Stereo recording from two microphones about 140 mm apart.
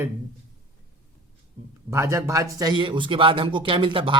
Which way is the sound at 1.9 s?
20° right (ahead or behind).